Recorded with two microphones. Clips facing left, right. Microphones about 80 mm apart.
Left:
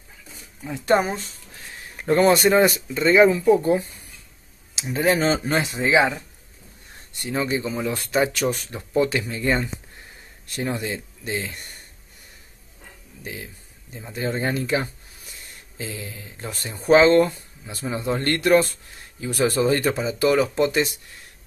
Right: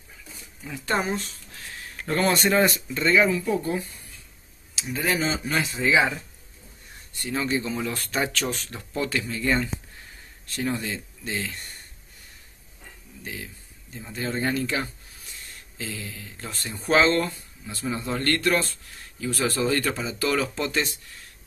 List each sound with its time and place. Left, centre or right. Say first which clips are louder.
0.7 s speech: left 6 dB; centre
1.5 s a sound: even; centre
2.3 s speech: left 4 dB; centre
3.1 s speech: left 6 dB; left
5.0 s speech: left 6 dB; left
5.8 s speech: left 2 dB; left
13.9 s speech: left 3 dB; centre
15.8 s speech: left 2 dB; centre